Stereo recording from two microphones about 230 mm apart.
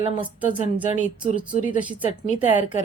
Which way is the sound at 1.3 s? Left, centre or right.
Left.